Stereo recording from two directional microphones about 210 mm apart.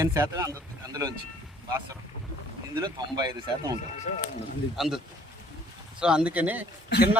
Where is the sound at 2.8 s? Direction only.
20° right (ahead or behind).